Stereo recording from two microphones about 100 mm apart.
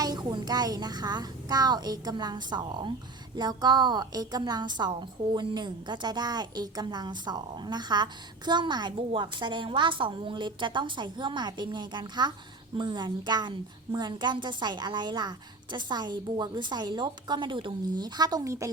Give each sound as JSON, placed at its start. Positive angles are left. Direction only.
{"t": 0.0, "sound": "a woman's voice", "side_deg": -45}